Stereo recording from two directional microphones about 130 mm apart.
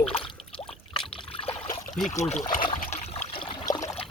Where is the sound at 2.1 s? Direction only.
60° left (ahead or behind).